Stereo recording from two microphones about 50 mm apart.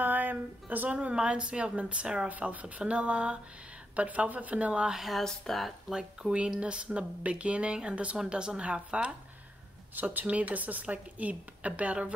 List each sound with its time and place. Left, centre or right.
0.0 s a sound: right
0.8 s speech: right
2.2 s a woman's voice: right
4.9 s speech: centre
5.9 s speech: centre
9.9 s a woman's voice: right